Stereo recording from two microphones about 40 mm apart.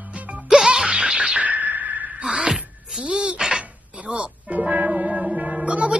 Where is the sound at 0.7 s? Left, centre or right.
Right.